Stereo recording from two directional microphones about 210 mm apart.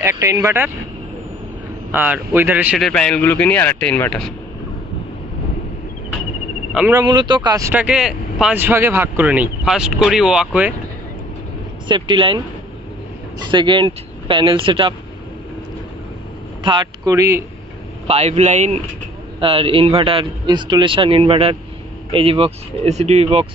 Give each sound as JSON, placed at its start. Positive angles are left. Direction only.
{"t": 0.2, "sound": "speech", "side_deg": -15}
{"t": 1.9, "sound": "speech", "side_deg": -10}
{"t": 2.9, "sound": "speech", "side_deg": 5}
{"t": 6.9, "sound": "speech", "side_deg": -20}
{"t": 11.9, "sound": "a man's voice", "side_deg": -25}
{"t": 13.5, "sound": "a man's voice", "side_deg": -20}
{"t": 16.6, "sound": "speech", "side_deg": -20}
{"t": 18.0, "sound": "a man's voice", "side_deg": -30}